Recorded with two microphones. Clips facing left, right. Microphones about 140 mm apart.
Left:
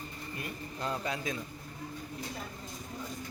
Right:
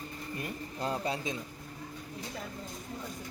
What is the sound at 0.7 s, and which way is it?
Speech, 30° right (ahead or behind).